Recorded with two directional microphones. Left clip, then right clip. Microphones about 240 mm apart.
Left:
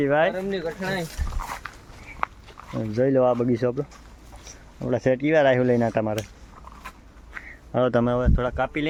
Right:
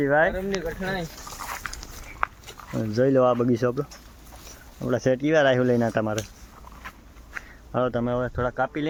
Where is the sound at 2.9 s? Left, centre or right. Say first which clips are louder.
Even; centre.